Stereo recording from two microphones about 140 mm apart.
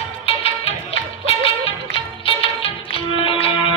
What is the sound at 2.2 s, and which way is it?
Music, 40° left (ahead or behind).